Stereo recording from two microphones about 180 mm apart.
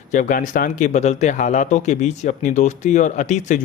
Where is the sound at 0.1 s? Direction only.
45° left (ahead or behind).